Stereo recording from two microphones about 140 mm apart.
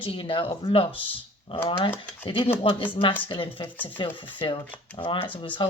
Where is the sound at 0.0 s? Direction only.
40° left (ahead or behind).